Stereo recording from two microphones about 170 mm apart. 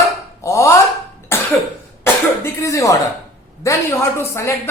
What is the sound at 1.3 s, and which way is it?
Cough, 15° left (ahead or behind).